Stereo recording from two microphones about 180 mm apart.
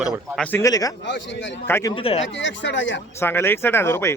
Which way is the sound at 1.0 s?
80° left.